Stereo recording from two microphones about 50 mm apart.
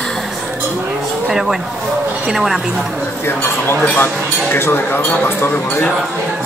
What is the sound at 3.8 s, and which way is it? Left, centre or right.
Speech, left.